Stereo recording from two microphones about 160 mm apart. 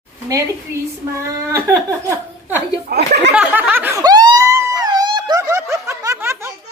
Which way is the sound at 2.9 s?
90° right.